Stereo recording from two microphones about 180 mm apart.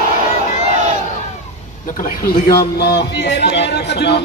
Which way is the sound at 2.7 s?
65° left (ahead or behind).